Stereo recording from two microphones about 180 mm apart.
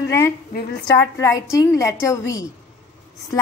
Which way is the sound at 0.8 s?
15° left (ahead or behind).